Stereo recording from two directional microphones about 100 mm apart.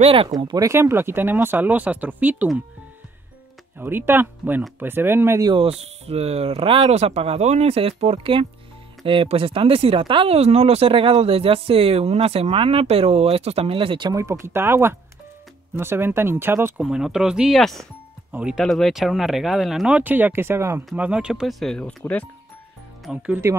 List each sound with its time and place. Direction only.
0.0 s speech: 70° right (ahead or behind)
0.3 s speech: 40° right (ahead or behind)
0.7 s speech: 25° right (ahead or behind)
3.8 s speech: 20° right (ahead or behind)
5.6 s speech: 85° right; by 14.1 s 55° right (ahead or behind)
14.1 s speech: 30° right (ahead or behind)
16.8 s speech: 5° right (ahead or behind)
18.3 s speech: 10° right (ahead or behind)
18.6 s speech: 5° left (ahead or behind)
20.0 s speech: 15° right (ahead or behind)
20.9 s speech: 10° right (ahead or behind); by 21.9 s 5° left (ahead or behind)
23.4 s speech: 25° right (ahead or behind)